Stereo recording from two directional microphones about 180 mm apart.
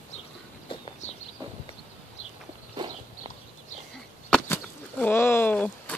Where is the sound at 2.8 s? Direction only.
25° right (ahead or behind).